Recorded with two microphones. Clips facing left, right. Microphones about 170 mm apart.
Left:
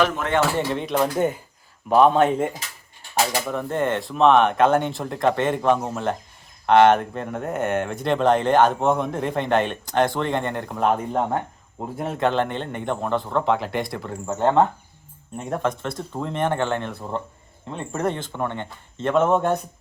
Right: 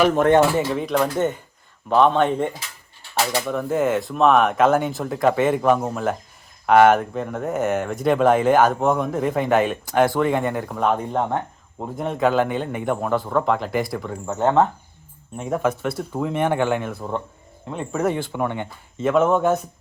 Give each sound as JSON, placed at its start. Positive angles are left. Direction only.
{"t": 0.1, "sound": "speech", "side_deg": -45}
{"t": 0.7, "sound": "speech", "side_deg": 0}
{"t": 16.9, "sound": "speech", "side_deg": 0}